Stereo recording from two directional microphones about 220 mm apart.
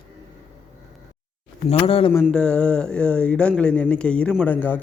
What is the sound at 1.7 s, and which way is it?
Speech, 25° left (ahead or behind).